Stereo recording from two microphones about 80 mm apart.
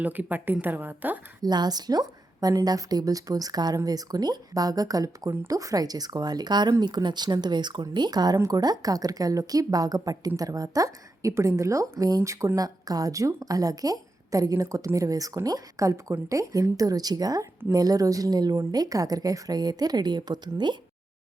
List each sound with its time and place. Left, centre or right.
0.0 s speech: right
1.4 s a woman's voice: right